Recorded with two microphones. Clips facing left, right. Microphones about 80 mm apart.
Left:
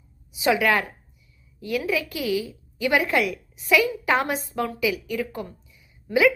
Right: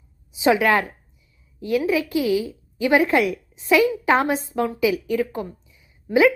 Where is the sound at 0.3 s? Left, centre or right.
Right.